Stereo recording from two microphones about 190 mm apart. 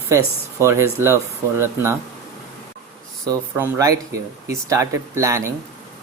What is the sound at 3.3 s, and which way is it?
Speech, 15° right (ahead or behind).